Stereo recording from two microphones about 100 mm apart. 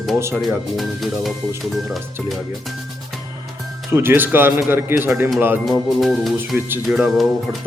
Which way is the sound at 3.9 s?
25° right (ahead or behind).